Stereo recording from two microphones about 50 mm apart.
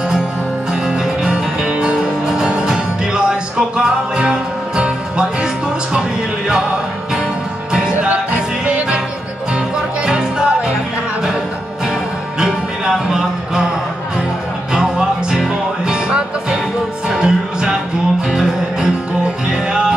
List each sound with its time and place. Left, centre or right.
0.8 s music: centre
7.9 s music: right
12.4 s music: centre
14.7 s music: centre